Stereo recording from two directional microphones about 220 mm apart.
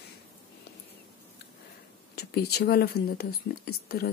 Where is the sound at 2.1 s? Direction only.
45° left (ahead or behind).